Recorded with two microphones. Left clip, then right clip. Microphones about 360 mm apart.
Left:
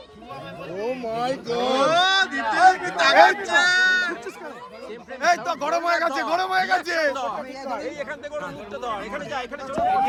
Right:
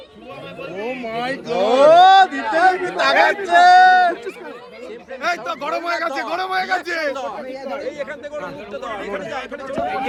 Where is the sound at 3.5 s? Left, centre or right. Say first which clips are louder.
Right 8 dB; centre.